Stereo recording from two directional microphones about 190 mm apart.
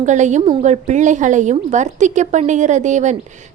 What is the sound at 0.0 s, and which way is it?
A woman's voice, 40° right (ahead or behind).